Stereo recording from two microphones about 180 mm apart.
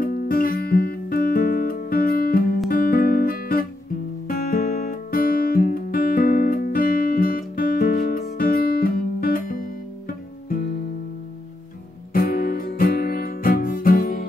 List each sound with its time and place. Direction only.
0.0 s music: 50° left (ahead or behind)
12.1 s music: 55° left (ahead or behind)